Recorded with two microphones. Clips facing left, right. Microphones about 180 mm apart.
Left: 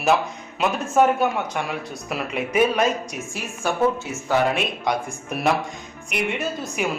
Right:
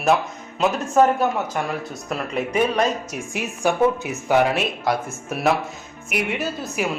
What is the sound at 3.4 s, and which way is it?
A woman's voice, 15° right (ahead or behind).